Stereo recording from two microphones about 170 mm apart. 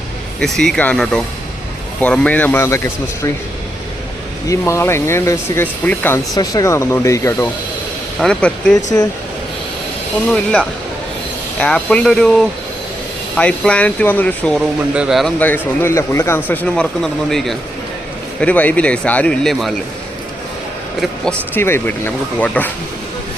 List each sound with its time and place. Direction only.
0.3 s speech: 5° left (ahead or behind)
4.4 s speech: 15° left (ahead or behind)
6.3 s speech: 20° left (ahead or behind)
8.2 s speech: 5° left (ahead or behind)
8.7 s speech: 20° left (ahead or behind)
10.2 s speech: 5° left (ahead or behind)
11.6 s speech: 5° left (ahead or behind)
14.6 s speech: 5° right (ahead or behind)
15.4 s speech: 10° left (ahead or behind)
21.0 s speech: 10° left (ahead or behind)